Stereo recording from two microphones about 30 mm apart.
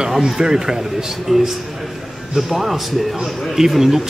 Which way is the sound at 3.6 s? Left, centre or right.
Centre.